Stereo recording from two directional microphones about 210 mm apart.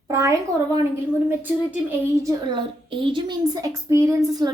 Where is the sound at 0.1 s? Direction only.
15° right (ahead or behind).